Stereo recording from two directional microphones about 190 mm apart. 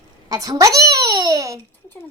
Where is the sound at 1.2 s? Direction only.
15° right (ahead or behind).